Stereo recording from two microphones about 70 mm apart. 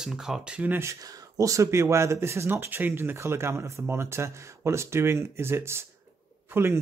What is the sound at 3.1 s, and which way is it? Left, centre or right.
A man's voice, right.